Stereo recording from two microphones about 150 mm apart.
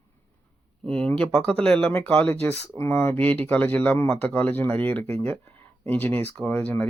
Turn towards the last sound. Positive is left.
turn(degrees=10)  # may be behind; listen again after turning